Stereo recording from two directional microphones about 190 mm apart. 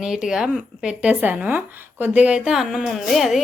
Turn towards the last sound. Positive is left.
turn(degrees=0)  # may be behind; listen again after turning